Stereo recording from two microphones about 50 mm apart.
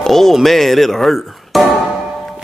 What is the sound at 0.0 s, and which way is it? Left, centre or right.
Speech, centre.